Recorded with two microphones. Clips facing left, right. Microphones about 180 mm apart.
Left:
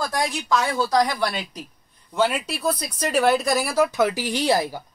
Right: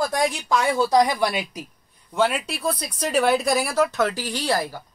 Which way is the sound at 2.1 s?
Centre (ahead or behind).